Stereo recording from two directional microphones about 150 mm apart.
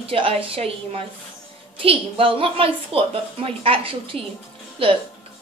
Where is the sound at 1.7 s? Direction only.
35° right (ahead or behind).